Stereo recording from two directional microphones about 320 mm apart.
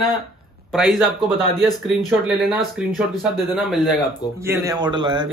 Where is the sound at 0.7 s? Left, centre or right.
Centre.